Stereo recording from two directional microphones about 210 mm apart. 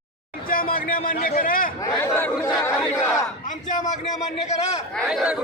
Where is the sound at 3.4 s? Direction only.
35° left (ahead or behind).